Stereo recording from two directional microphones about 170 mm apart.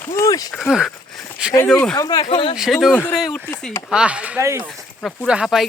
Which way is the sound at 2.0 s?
25° left (ahead or behind).